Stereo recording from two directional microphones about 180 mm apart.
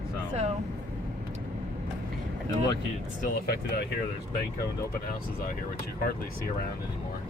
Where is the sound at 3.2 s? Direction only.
60° left (ahead or behind).